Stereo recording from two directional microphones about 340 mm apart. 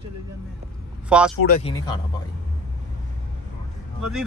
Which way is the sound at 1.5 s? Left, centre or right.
Centre.